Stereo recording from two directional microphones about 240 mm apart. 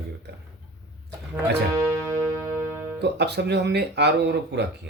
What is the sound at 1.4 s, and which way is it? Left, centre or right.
Music, centre.